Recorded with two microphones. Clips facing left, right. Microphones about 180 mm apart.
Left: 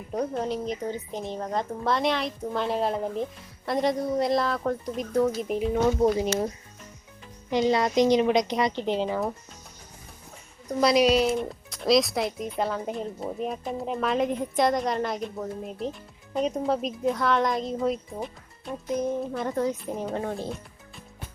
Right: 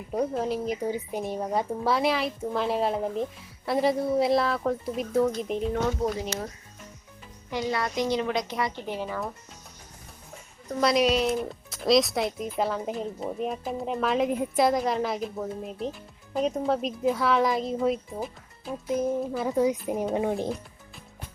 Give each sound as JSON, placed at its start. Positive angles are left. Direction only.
{"t": 0.1, "sound": "speech", "side_deg": -5}
{"t": 7.5, "sound": "a woman's voice", "side_deg": 20}
{"t": 10.8, "sound": "speech", "side_deg": 0}